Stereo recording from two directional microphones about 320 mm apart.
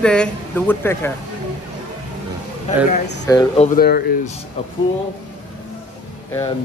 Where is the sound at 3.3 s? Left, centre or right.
Centre.